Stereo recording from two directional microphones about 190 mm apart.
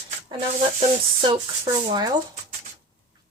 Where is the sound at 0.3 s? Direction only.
30° right (ahead or behind).